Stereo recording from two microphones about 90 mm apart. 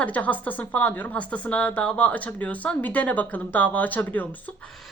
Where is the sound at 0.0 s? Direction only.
15° left (ahead or behind).